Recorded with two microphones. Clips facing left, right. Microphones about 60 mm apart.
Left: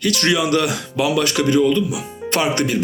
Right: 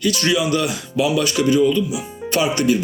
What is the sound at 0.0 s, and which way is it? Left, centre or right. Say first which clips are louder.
Speech: even; left.